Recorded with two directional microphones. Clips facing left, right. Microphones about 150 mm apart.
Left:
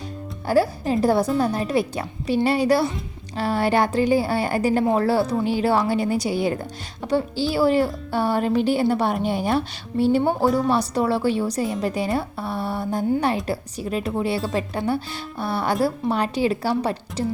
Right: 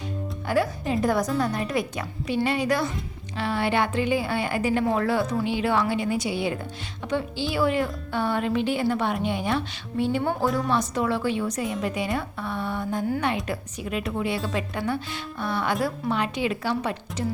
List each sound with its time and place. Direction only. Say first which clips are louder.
0.4 s speech: left 5 dB; 35° left (ahead or behind)
10.4 s speech: left 5 dB; centre (ahead or behind)
10.7 s speech: left 4 dB; 35° left (ahead or behind)